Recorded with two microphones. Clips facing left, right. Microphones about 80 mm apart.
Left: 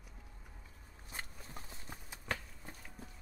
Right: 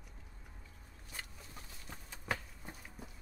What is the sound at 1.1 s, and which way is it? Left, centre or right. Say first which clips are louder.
Walk: left 2 dB; left.